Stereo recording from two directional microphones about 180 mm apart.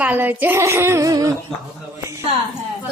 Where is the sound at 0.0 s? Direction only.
10° right (ahead or behind).